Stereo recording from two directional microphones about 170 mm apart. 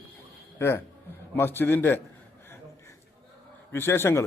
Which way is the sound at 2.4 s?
15° left (ahead or behind).